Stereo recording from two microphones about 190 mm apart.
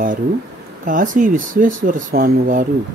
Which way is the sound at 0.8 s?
45° right (ahead or behind).